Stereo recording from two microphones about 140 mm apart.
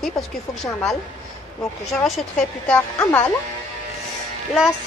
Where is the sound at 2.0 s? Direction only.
Centre (ahead or behind).